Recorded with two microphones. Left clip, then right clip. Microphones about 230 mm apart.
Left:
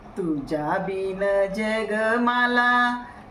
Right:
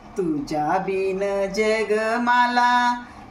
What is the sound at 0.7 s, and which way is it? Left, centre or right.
Female singing, centre.